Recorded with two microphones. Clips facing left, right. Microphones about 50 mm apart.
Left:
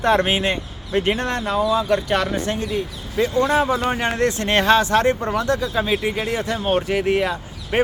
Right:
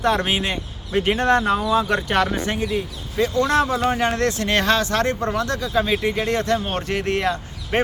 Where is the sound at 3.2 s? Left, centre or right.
Left.